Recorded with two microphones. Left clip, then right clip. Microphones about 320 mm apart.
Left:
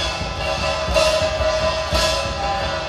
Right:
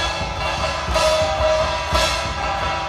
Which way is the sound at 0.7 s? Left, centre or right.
Centre.